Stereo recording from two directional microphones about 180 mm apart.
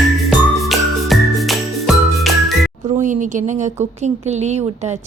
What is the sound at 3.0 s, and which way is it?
A woman's voice, 45° right (ahead or behind).